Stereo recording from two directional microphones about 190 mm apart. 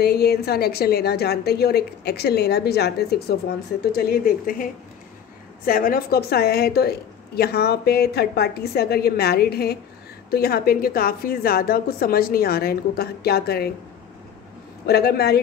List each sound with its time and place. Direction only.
0.0 s a woman's voice: 60° left (ahead or behind)
5.7 s a woman's voice: 50° left (ahead or behind)
14.9 s a woman's voice: 55° left (ahead or behind)